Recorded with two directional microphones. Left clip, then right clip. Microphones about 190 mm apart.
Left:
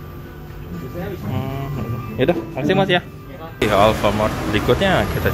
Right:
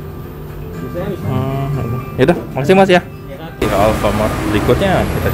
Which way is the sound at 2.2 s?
20° right (ahead or behind).